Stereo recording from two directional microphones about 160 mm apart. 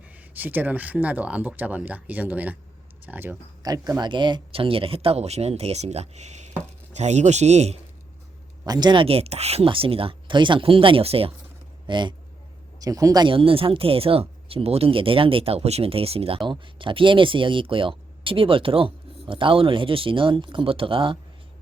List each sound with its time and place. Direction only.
0.0 s speech: 10° right (ahead or behind)
3.6 s a man's voice: 25° right (ahead or behind); by 7.8 s 45° right (ahead or behind)
8.6 s speech: 25° right (ahead or behind)